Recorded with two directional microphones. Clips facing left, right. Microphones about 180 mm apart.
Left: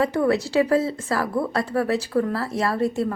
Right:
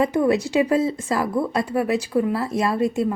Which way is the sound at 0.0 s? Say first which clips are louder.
Right 2 dB; 15° right (ahead or behind).